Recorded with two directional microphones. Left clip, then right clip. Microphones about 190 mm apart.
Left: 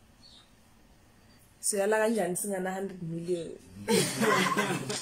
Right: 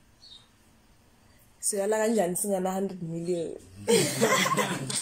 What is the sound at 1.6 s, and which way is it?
Speech, centre (ahead or behind).